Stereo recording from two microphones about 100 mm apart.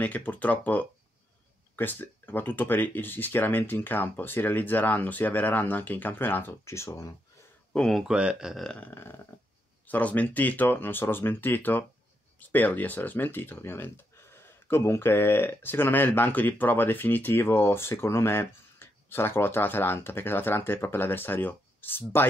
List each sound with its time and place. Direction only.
0.0 s speech: 15° left (ahead or behind); by 7.2 s 30° left (ahead or behind)
7.7 s speech: 5° left (ahead or behind)
8.0 s speech: 10° right (ahead or behind)
9.8 s speech: 15° left (ahead or behind)